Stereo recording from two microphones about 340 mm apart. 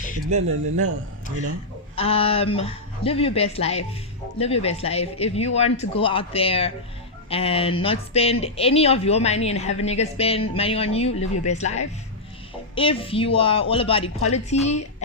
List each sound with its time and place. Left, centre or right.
0.3 s speech: right
2.0 s a woman's voice: centre